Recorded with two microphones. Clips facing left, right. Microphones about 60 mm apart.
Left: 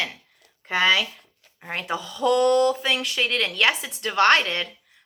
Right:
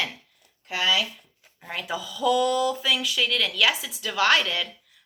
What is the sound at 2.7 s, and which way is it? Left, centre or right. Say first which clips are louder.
Speech: left 1 dB; left.